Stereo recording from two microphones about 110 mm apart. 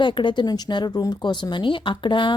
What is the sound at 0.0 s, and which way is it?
A woman's voice, 45° left (ahead or behind).